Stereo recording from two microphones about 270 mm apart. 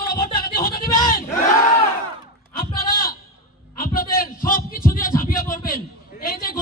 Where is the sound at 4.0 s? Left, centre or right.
Left.